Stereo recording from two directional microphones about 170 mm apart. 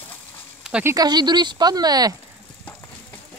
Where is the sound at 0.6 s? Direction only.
5° right (ahead or behind).